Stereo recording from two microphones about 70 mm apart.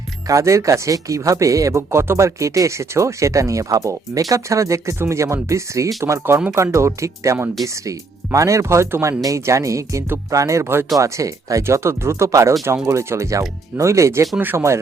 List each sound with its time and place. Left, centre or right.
0.3 s speech: right
10.9 s speech: right
11.6 s speech: right
14.3 s speech: right